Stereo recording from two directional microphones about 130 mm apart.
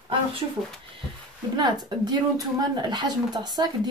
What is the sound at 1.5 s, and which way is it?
Speech, 35° right (ahead or behind).